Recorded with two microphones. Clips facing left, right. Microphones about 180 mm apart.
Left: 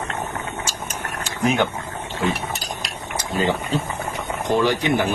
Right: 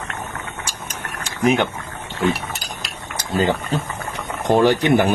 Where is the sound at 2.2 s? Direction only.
Centre (ahead or behind).